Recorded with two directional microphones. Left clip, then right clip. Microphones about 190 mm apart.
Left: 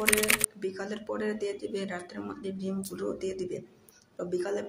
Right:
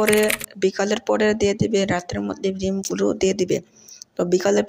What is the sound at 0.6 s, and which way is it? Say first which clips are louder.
Speech: right 15 dB; 35° right (ahead or behind).